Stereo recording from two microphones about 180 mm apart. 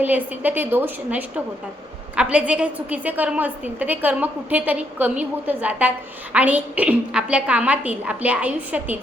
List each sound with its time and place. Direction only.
0.0 s a woman's voice: 10° right (ahead or behind)